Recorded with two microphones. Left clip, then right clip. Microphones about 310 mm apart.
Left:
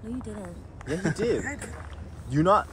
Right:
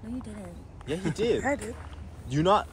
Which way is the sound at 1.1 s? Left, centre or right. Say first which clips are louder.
Right 4 dB; centre.